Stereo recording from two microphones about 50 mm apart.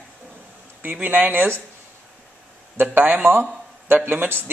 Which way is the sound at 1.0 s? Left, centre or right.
Right.